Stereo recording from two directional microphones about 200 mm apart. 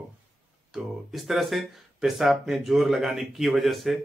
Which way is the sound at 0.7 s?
Centre (ahead or behind).